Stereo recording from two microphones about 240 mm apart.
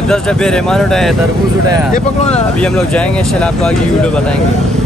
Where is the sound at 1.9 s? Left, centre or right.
Left.